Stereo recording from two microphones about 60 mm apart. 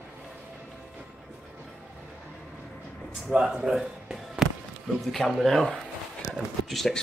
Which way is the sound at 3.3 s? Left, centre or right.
Centre.